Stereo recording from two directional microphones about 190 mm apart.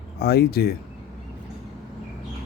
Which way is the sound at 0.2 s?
55° left (ahead or behind).